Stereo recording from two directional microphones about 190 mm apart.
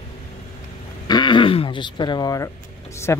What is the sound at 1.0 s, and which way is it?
Speech, 25° left (ahead or behind).